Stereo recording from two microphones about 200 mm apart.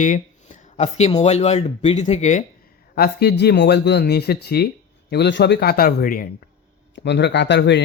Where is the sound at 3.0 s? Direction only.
55° left (ahead or behind).